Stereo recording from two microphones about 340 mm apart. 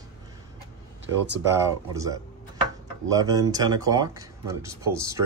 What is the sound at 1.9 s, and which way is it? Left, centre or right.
Speech, centre.